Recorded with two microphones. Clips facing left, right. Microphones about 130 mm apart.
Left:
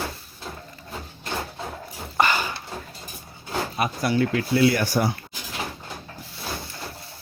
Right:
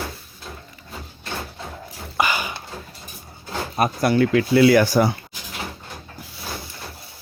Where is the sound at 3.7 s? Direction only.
50° right (ahead or behind); by 5.1 s 90° right.